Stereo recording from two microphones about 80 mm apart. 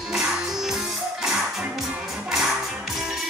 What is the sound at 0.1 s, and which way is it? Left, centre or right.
Music, centre.